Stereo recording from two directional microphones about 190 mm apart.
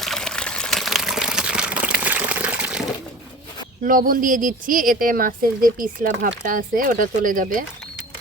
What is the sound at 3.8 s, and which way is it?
Speech, 45° right (ahead or behind).